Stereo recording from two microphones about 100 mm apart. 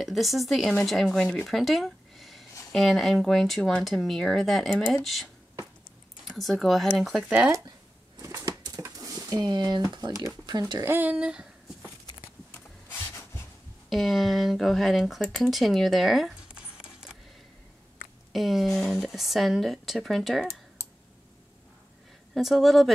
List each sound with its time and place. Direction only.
0.0 s speech: centre (ahead or behind)
1.4 s a sound: centre (ahead or behind)
2.7 s speech: centre (ahead or behind)
8.2 s typewriter: 35° right (ahead or behind)
8.8 s a sound: 35° right (ahead or behind)
10.9 s speech: 15° right (ahead or behind)
12.4 s rub: 20° left (ahead or behind)
13.8 s speech: centre (ahead or behind)
18.3 s speech: centre (ahead or behind)
22.3 s speech: centre (ahead or behind)